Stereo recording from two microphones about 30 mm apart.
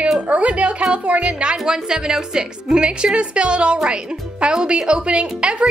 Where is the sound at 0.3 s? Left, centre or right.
Right.